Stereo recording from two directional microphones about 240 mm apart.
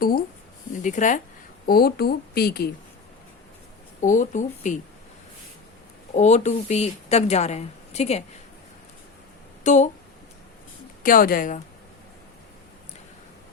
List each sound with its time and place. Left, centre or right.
0.0 s a woman's voice: left
4.0 s a woman's voice: left
6.1 s a woman's voice: left
9.6 s a woman's voice: left
11.0 s a woman's voice: left